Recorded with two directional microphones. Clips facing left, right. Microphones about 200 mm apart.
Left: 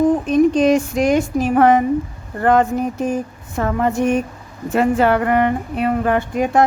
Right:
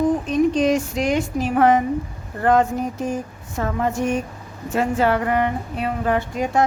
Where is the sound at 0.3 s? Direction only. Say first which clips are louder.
Left 4 dB; 55° left (ahead or behind).